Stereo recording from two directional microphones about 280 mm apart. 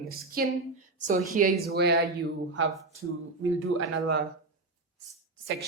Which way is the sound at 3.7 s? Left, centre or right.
Right.